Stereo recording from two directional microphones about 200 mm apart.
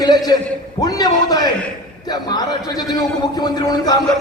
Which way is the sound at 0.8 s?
20° left (ahead or behind).